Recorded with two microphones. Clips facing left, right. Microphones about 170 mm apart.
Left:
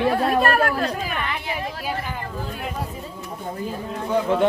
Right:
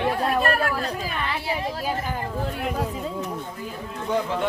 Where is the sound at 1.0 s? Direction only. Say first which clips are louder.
Left 1 dB; 30° right (ahead or behind).